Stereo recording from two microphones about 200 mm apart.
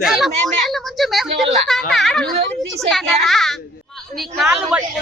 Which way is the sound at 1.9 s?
Centre (ahead or behind).